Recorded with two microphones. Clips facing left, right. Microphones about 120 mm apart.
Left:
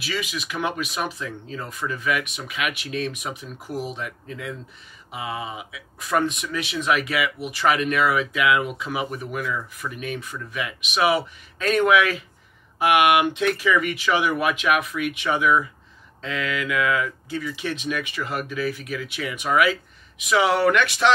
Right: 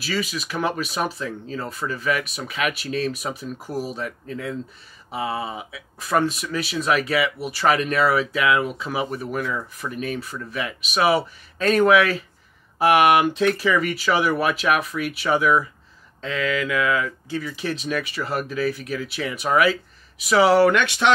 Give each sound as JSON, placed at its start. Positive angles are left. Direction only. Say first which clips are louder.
{"t": 0.0, "sound": "speech", "louder": "right 3 dB", "side_deg": -35}